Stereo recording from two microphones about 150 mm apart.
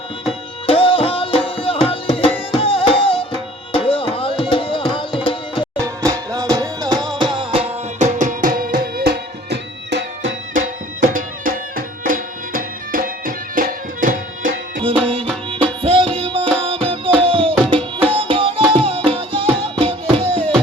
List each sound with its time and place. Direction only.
0.3 s music: 40° left (ahead or behind)
3.7 s tabla: 35° left (ahead or behind)
5.8 s music: 20° right (ahead or behind)
7.9 s music: 55° right (ahead or behind); by 9.6 s 90° right
11.0 s music: 65° right (ahead or behind)
14.8 s music: 35° right (ahead or behind)
18.1 s tabla: 35° right (ahead or behind)
19.8 s music: 40° right (ahead or behind)